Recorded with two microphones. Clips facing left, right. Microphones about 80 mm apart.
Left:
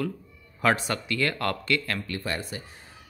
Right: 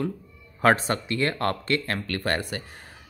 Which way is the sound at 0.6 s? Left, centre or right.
Right.